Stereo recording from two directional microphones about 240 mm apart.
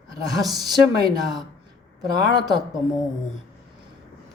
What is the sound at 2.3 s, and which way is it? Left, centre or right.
Speech, centre.